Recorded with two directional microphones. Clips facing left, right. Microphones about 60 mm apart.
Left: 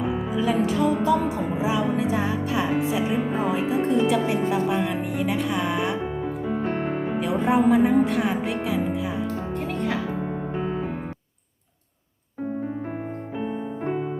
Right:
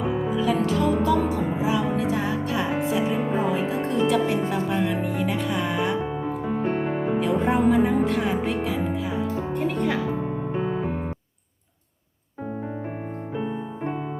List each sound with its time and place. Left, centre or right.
0.1 s speech: centre
1.0 s music: centre
3.2 s speech: centre
9.2 s music: centre